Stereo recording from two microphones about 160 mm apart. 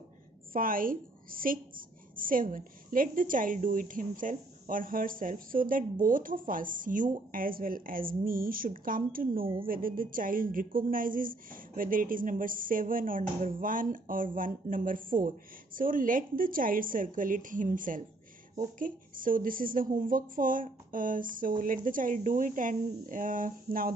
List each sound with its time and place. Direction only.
0.5 s a woman's voice: 60° right (ahead or behind)